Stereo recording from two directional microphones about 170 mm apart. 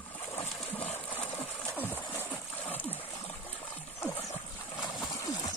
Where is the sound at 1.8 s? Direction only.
10° left (ahead or behind).